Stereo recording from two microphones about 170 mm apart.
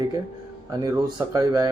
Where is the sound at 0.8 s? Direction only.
20° right (ahead or behind).